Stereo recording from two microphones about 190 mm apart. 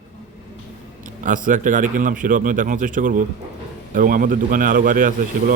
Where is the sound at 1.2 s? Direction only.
45° right (ahead or behind).